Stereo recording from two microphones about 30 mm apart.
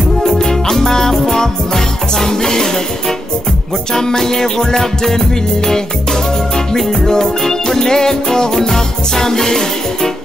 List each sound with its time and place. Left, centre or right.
0.3 s music: centre
3.9 s music: left
6.5 s music: centre